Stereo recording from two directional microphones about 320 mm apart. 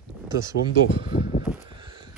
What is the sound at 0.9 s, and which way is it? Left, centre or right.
Speech, centre.